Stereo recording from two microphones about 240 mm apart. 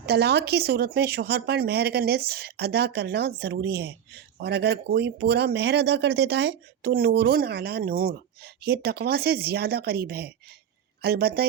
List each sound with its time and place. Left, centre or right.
0.0 s speech: right